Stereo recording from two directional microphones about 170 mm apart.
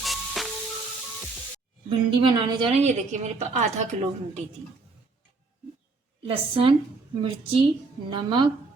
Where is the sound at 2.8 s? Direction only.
45° right (ahead or behind).